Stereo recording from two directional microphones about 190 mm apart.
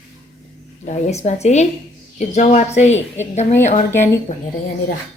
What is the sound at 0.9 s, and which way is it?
A woman's voice, 35° left (ahead or behind).